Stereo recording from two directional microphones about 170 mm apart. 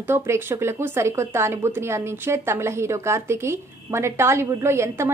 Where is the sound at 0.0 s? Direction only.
15° right (ahead or behind).